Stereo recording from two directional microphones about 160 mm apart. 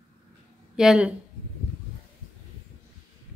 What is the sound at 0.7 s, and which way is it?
Speech, 5° right (ahead or behind).